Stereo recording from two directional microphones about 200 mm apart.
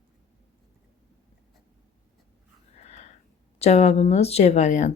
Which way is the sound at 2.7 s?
35° left (ahead or behind).